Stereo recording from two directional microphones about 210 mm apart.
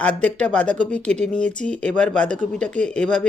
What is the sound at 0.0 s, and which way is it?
Speech, 5° left (ahead or behind).